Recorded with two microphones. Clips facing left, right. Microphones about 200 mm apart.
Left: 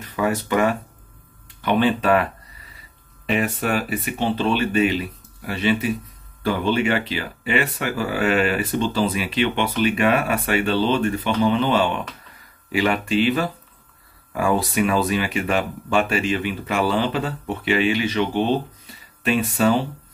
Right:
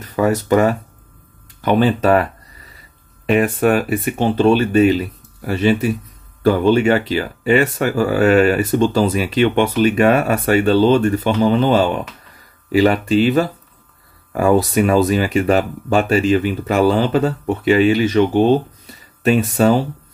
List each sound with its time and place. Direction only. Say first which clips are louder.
0.0 s speech: right 6 dB; 40° right (ahead or behind)
3.3 s speech: right 8 dB; 55° right (ahead or behind)